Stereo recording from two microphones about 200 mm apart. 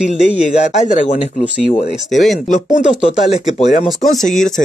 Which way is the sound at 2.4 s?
40° left (ahead or behind).